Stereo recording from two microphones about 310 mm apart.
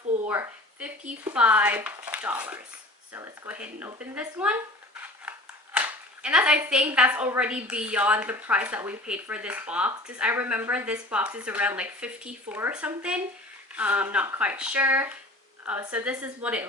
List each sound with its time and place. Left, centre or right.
0.3 s a woman's voice: centre
5.3 s scissors: centre
5.7 s a woman's voice: centre